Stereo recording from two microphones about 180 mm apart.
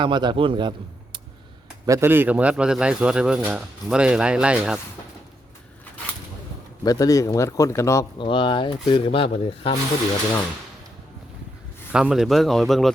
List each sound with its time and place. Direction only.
0.0 s a man's voice: 25° right (ahead or behind)
1.9 s speech: 15° right (ahead or behind)
6.8 s speech: 20° left (ahead or behind)
8.2 s speech: 30° left (ahead or behind)
11.9 s speech: 5° right (ahead or behind)